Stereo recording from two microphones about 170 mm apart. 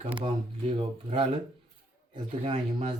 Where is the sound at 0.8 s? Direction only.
35° right (ahead or behind).